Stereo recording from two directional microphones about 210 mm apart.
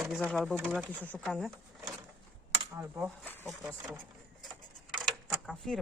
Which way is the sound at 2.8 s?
10° right (ahead or behind).